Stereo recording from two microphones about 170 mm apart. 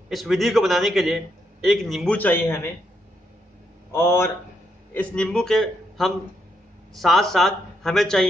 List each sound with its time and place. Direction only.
0.1 s a man's voice: centre (ahead or behind)
2.1 s speech: 10° left (ahead or behind)
3.9 s a man's voice: 15° left (ahead or behind)